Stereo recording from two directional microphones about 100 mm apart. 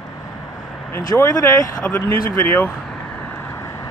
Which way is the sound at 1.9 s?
20° left (ahead or behind).